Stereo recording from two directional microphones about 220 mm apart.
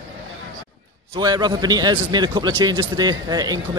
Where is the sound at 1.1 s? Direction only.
20° right (ahead or behind).